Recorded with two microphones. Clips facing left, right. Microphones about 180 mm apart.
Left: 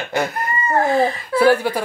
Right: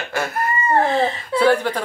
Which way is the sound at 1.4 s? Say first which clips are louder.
Left 2 dB; 10° left (ahead or behind).